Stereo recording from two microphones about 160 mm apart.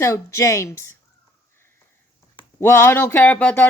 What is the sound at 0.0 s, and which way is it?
Speech, 20° left (ahead or behind).